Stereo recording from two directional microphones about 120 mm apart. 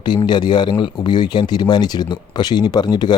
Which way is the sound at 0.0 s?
40° left (ahead or behind).